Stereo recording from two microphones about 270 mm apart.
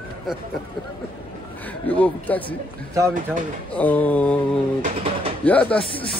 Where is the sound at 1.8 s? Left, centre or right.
Centre.